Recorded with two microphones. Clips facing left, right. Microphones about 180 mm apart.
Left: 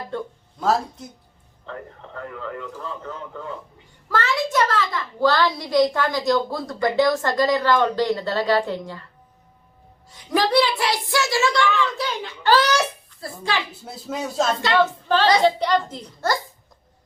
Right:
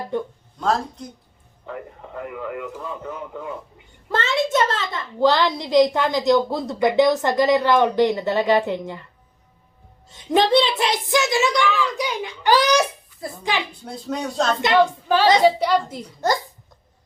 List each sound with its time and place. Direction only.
0.1 s a man's voice: 15° right (ahead or behind)
0.6 s speech: 5° left (ahead or behind)
1.6 s a man's voice: 10° right (ahead or behind)
4.1 s a child's voice: 25° right (ahead or behind)
10.1 s a child's voice: 25° right (ahead or behind)
13.8 s speech: 5° left (ahead or behind)
14.6 s a man's voice: 15° right (ahead or behind)